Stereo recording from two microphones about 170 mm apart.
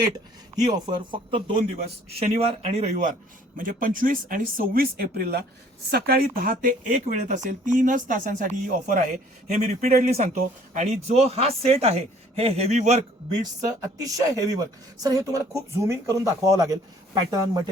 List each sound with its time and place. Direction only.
1.1 s speech: 30° right (ahead or behind)
13.4 s speech: 20° right (ahead or behind)